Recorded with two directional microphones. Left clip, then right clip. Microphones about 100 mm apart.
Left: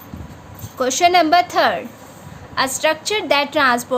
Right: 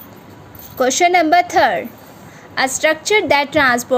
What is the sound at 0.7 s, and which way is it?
A woman's voice, 30° right (ahead or behind).